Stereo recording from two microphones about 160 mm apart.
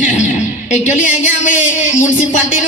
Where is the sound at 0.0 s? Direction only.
50° left (ahead or behind).